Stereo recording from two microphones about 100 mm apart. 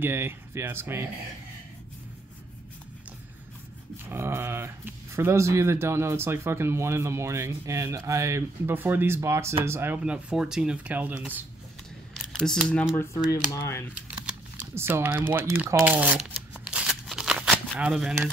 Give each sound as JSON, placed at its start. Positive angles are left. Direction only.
{"t": 0.0, "sound": "speech", "side_deg": -20}
{"t": 3.9, "sound": "speech", "side_deg": -25}
{"t": 9.9, "sound": "speech", "side_deg": -10}
{"t": 12.3, "sound": "speech", "side_deg": 5}
{"t": 12.9, "sound": "speech", "side_deg": 25}
{"t": 14.8, "sound": "speech", "side_deg": -25}
{"t": 16.6, "sound": "shuffling cards", "side_deg": -10}